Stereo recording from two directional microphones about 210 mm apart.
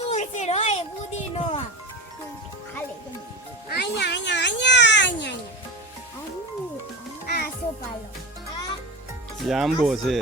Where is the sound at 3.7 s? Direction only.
55° left (ahead or behind).